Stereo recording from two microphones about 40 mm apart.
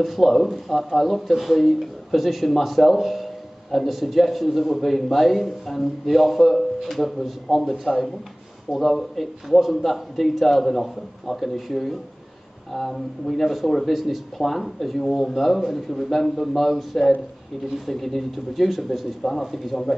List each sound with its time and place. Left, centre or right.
0.0 s speech: centre